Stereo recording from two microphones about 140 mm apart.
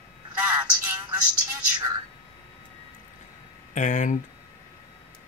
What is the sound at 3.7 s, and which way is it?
Speech, 60° left (ahead or behind).